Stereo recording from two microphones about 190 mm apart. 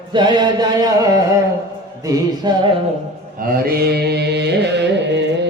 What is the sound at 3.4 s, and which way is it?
Carnatic music, 55° right (ahead or behind).